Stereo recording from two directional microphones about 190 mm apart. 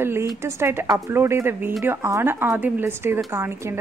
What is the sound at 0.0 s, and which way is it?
Speech, 10° right (ahead or behind).